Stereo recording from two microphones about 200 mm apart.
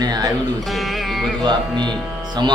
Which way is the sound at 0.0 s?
20° right (ahead or behind).